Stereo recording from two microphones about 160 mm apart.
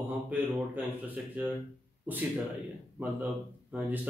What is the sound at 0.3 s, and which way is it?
Speech, 10° right (ahead or behind).